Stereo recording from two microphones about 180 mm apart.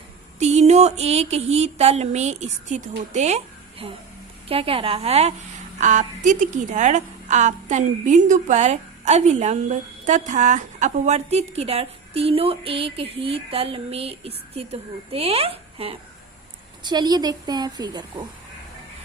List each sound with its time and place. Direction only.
0.3 s a woman's voice: 35° right (ahead or behind)